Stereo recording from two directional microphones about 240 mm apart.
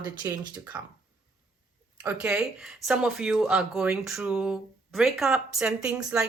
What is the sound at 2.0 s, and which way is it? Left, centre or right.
Speech, centre.